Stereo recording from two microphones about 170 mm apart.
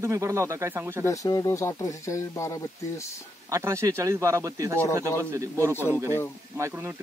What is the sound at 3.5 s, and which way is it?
A man's voice, 15° right (ahead or behind).